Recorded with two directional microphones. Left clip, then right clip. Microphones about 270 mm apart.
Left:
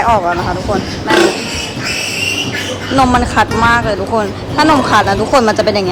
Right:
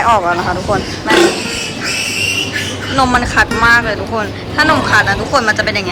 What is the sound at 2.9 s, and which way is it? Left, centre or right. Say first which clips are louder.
Speech: left 1 dB; centre.